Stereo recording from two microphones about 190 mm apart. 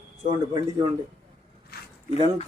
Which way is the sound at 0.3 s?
25° right (ahead or behind).